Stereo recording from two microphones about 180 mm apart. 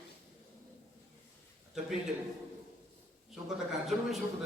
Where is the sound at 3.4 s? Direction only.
Centre (ahead or behind).